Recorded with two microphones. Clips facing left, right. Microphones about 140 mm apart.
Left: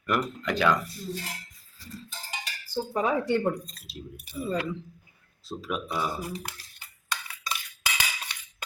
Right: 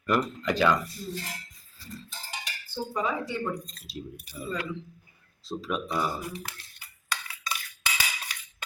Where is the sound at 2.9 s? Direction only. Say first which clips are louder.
Left 5 dB; 55° left (ahead or behind).